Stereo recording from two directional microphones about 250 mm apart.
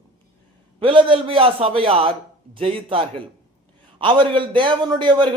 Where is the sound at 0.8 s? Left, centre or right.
Right.